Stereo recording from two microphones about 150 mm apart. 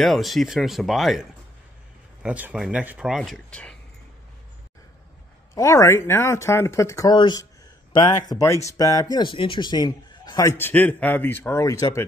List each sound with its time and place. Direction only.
0.0 s speech: centre (ahead or behind)
2.2 s speech: 10° right (ahead or behind)
3.2 s speech: 5° left (ahead or behind)
5.5 s a man's voice: 20° left (ahead or behind)